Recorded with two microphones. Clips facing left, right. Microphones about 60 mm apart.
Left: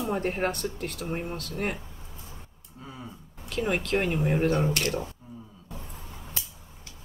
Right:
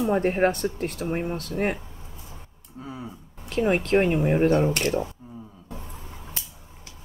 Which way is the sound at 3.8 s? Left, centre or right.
Right.